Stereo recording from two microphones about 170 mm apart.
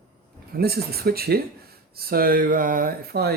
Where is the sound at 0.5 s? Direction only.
65° right (ahead or behind).